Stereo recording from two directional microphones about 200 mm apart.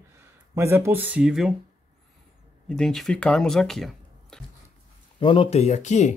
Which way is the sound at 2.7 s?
Centre (ahead or behind).